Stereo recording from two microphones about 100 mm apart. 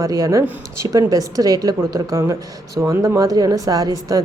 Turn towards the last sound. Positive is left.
turn(degrees=-35)  # may be behind; listen again after turning